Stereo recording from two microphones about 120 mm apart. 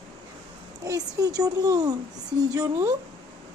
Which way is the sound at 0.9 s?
30° right (ahead or behind).